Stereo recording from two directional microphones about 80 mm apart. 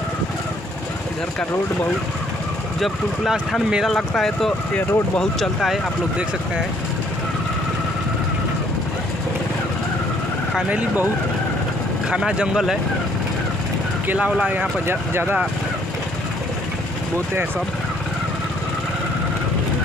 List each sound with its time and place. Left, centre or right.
2.8 s speech: centre
10.7 s speech: centre
12.1 s speech: centre
14.0 s speech: centre
14.9 s speech: right